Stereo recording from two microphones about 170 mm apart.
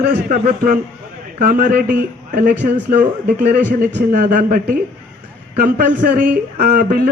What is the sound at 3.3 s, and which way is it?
Speech, 10° right (ahead or behind).